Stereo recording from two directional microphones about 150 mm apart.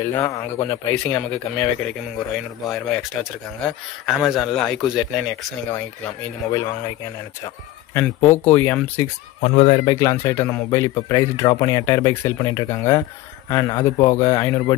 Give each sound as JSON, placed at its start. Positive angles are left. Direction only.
{"t": 0.0, "sound": "speech", "side_deg": 20}
{"t": 2.1, "sound": "speech", "side_deg": 5}
{"t": 5.7, "sound": "speech", "side_deg": 10}
{"t": 7.9, "sound": "speech", "side_deg": 15}
{"t": 9.4, "sound": "speech", "side_deg": 40}
{"t": 9.9, "sound": "speech", "side_deg": 20}